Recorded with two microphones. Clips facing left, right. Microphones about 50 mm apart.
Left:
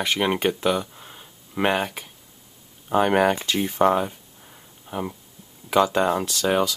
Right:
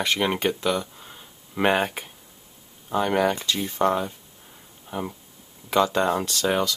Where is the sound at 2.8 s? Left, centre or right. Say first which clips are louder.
Left 3 dB; left.